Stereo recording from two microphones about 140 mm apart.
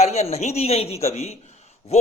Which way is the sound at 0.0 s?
50° left (ahead or behind).